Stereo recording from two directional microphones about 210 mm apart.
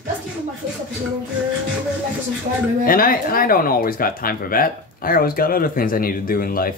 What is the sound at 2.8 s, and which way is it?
Speech, 45° left (ahead or behind).